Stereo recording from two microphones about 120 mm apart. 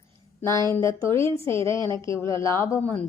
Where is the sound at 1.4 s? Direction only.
50° right (ahead or behind).